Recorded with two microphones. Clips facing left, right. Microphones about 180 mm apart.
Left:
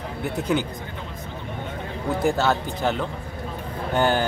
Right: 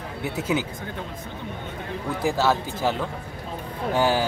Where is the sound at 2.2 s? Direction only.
Centre (ahead or behind).